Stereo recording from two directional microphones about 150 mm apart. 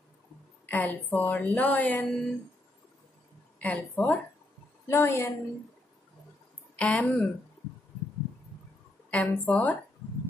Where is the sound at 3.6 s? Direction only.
10° left (ahead or behind).